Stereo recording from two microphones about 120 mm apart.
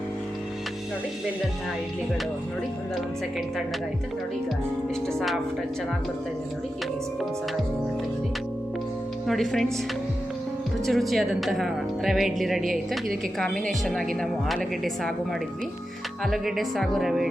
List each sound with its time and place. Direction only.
5.0 s speech: centre (ahead or behind)
9.2 s speech: centre (ahead or behind)
10.8 s speech: centre (ahead or behind)
16.2 s speech: centre (ahead or behind)